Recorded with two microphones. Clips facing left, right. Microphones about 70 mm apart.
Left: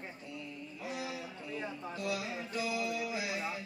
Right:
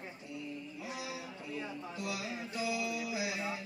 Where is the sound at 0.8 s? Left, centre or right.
Left.